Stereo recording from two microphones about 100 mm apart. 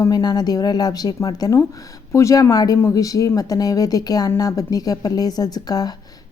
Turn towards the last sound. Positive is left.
turn(degrees=40)  # may be behind; listen again after turning